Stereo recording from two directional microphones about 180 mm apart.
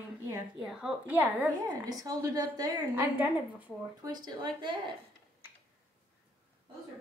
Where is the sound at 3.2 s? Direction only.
10° right (ahead or behind).